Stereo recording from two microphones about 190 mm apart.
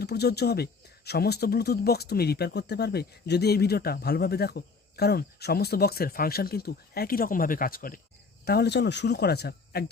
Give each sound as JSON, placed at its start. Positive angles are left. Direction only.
{"t": 0.0, "sound": "speech", "side_deg": 60}
{"t": 8.4, "sound": "speech", "side_deg": 60}